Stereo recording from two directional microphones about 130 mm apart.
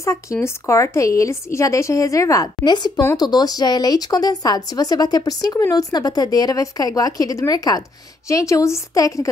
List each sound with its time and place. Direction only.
0.0 s a woman's voice: 25° left (ahead or behind)